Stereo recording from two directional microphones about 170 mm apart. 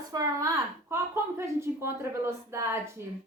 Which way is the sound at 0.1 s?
20° right (ahead or behind).